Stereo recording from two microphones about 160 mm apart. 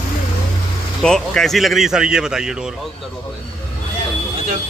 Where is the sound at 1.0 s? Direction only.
5° left (ahead or behind).